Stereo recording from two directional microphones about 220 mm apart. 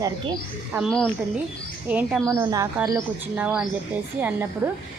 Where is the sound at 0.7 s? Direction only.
Centre (ahead or behind).